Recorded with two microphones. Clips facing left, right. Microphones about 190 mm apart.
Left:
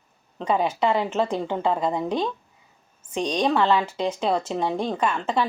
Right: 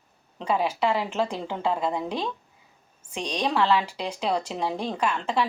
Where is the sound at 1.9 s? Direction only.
35° left (ahead or behind).